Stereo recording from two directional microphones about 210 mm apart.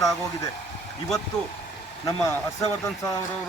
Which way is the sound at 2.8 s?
15° left (ahead or behind).